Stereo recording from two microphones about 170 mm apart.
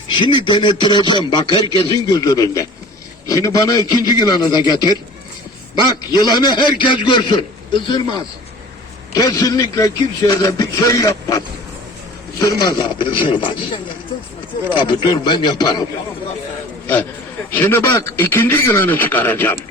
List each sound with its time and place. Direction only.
0.1 s speech: 30° left (ahead or behind)
6.1 s speech: 25° left (ahead or behind)
14.8 s speech: 30° left (ahead or behind)
16.8 s a man's voice: 10° left (ahead or behind)